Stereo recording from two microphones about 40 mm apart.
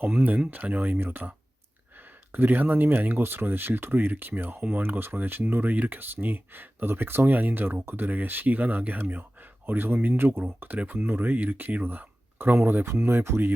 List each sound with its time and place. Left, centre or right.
0.0 s speech: right
2.3 s speech: right
5.7 s speech: right
10.8 s speech: right
11.0 s speech: right
11.8 s a sound: right
12.5 s speech: right